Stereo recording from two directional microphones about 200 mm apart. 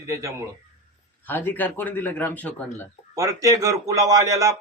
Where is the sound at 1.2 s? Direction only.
10° left (ahead or behind).